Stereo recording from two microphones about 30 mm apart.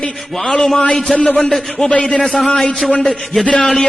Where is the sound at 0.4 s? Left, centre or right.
Centre.